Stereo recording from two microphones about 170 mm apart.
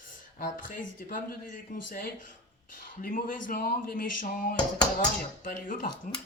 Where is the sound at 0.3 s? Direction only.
55° left (ahead or behind).